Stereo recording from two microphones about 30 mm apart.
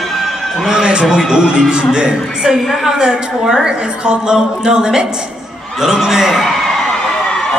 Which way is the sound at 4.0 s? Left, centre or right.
Right.